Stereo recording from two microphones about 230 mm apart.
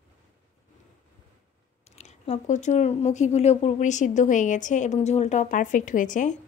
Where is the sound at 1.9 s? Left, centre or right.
Left.